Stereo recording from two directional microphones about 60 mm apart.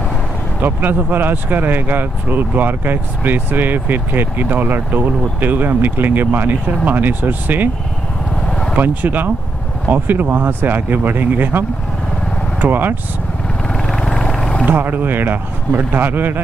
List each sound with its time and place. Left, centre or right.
0.6 s speech: right
8.5 s vehicle: centre
8.7 s speech: right
12.6 s speech: right
13.9 s vehicle: centre
14.7 s speech: right